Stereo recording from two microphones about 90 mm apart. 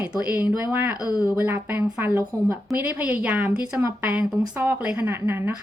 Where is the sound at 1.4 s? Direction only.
20° right (ahead or behind).